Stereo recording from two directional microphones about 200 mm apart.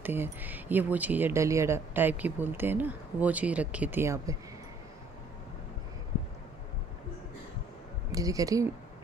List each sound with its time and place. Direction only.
0.0 s speech: 10° right (ahead or behind)
8.1 s speech: 15° right (ahead or behind)